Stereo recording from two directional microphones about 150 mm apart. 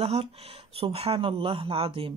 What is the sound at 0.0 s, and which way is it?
Speech, 45° right (ahead or behind).